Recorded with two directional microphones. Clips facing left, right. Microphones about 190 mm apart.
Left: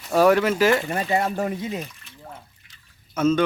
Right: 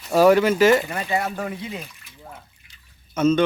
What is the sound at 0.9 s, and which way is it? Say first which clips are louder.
Speech: left 2 dB; 30° left (ahead or behind).